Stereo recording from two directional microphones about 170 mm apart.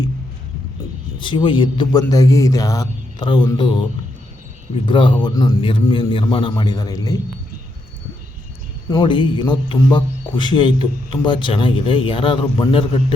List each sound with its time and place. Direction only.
1.2 s a man's voice: 30° left (ahead or behind)
4.9 s a man's voice: 30° left (ahead or behind)
8.9 s a man's voice: 25° left (ahead or behind)